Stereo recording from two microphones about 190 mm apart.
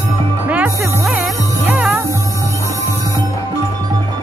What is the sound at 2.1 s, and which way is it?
Music, 15° right (ahead or behind).